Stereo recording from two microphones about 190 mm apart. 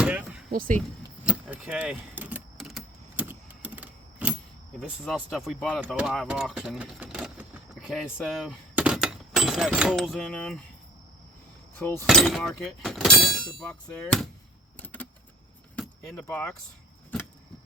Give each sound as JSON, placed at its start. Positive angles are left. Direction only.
{"t": 0.0, "sound": "a sound", "side_deg": -5}
{"t": 0.5, "sound": "speech", "side_deg": -50}
{"t": 1.2, "sound": "keys jangling", "side_deg": -5}
{"t": 4.8, "sound": "speech", "side_deg": 0}
{"t": 11.8, "sound": "speech", "side_deg": 10}
{"t": 12.0, "sound": "speech", "side_deg": 0}
{"t": 15.7, "sound": "keys jangling", "side_deg": 5}
{"t": 16.2, "sound": "speech", "side_deg": 10}